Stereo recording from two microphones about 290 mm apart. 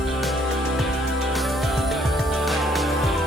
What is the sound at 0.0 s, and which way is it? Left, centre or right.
Music, centre.